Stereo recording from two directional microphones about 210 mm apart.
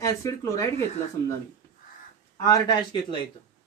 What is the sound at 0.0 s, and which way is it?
Speech, 15° left (ahead or behind).